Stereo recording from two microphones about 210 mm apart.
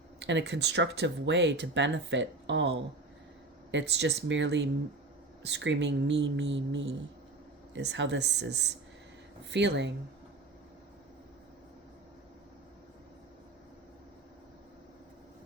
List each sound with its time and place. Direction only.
0.2 s speech: 55° right (ahead or behind)